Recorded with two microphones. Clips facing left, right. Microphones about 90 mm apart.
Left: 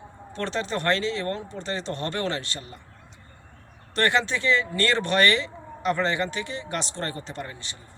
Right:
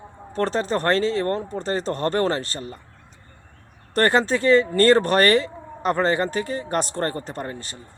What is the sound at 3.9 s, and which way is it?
Speech, 40° right (ahead or behind).